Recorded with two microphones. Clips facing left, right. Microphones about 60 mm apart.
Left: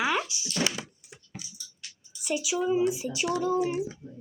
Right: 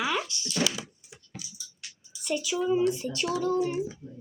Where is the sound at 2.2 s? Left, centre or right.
Centre.